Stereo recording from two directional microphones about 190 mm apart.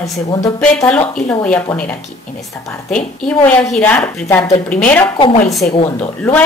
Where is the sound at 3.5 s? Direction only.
5° left (ahead or behind).